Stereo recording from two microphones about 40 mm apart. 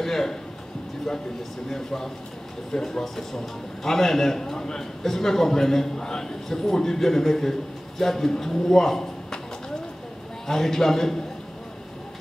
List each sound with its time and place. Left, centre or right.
0.0 s speech: centre
1.7 s a man's voice: centre
10.4 s a man's voice: centre